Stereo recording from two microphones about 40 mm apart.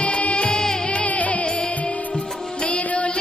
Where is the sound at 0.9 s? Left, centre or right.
Left.